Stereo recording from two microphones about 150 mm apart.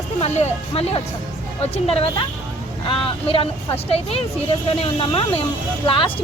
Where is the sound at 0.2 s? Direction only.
45° left (ahead or behind).